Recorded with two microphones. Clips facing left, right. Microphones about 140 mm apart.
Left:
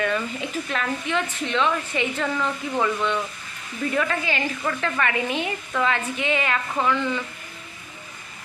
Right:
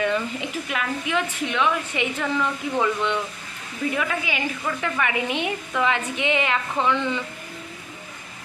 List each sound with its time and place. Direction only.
0.0 s a woman's voice: 20° right (ahead or behind)